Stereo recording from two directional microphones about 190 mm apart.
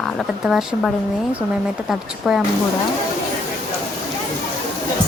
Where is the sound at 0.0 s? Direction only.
Centre (ahead or behind).